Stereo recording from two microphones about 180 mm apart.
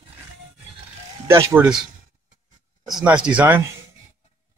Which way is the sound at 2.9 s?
5° right (ahead or behind).